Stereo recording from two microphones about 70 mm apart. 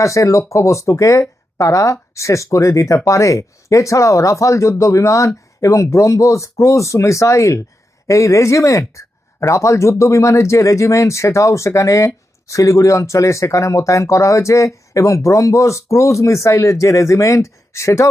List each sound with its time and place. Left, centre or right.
0.0 s speech: left